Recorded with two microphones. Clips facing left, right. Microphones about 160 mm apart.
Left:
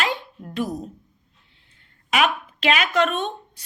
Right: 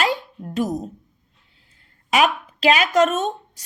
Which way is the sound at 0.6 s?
45° right (ahead or behind).